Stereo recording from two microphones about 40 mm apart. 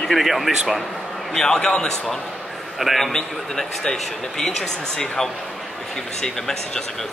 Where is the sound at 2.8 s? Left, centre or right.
Centre.